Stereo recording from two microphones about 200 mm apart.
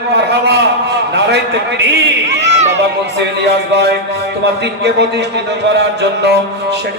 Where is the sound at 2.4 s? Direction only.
35° right (ahead or behind).